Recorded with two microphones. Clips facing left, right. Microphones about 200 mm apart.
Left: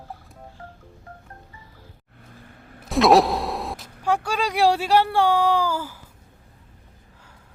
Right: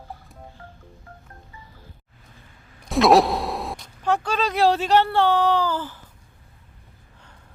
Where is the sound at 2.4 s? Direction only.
55° left (ahead or behind).